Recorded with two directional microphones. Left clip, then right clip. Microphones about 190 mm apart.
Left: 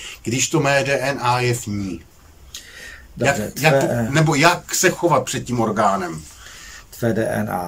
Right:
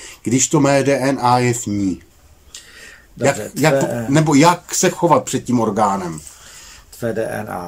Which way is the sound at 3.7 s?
5° right (ahead or behind).